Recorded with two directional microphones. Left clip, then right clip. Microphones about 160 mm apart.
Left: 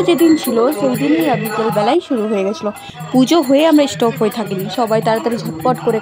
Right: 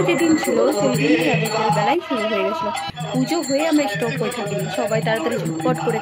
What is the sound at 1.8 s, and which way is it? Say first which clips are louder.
Speech: left 4 dB; 40° left (ahead or behind).